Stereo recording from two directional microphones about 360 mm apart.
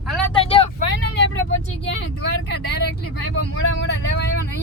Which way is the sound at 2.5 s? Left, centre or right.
Left.